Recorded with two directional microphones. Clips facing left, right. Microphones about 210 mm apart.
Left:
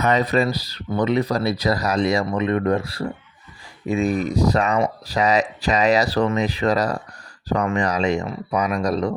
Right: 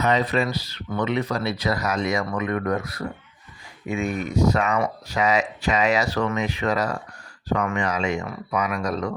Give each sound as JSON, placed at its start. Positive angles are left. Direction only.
{"t": 0.0, "sound": "speech", "side_deg": 45}